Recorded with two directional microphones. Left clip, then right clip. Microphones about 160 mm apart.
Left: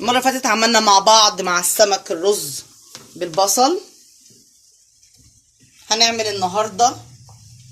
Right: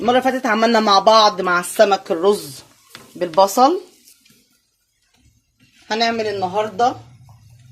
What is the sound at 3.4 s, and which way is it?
Speech, 40° right (ahead or behind).